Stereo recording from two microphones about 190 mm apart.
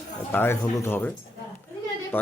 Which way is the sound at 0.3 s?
10° left (ahead or behind).